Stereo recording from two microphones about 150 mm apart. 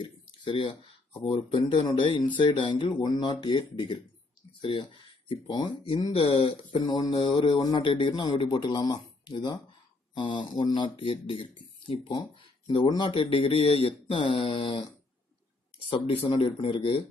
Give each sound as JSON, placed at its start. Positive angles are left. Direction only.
{"t": 0.0, "sound": "a sound", "side_deg": 30}
{"t": 1.3, "sound": "speech", "side_deg": 30}
{"t": 6.7, "sound": "speech", "side_deg": 30}
{"t": 15.9, "sound": "speech", "side_deg": 35}